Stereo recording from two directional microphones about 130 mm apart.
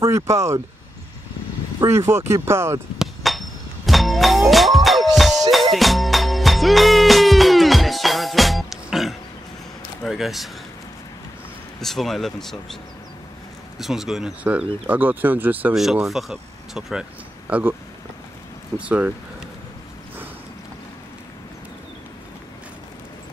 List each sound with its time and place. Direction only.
0.0 s speech: 25° right (ahead or behind)
1.8 s speech: 20° right (ahead or behind)
3.0 s doorbell: centre (ahead or behind)
5.5 s music: centre (ahead or behind)
10.0 s speech: centre (ahead or behind)
11.8 s speech: centre (ahead or behind)
13.7 s speech: centre (ahead or behind)
15.7 s speech: 5° right (ahead or behind)
18.8 s speech: 10° right (ahead or behind)